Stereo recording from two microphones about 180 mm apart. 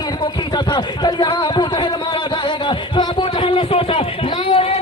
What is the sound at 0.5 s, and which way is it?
Speech, 25° left (ahead or behind).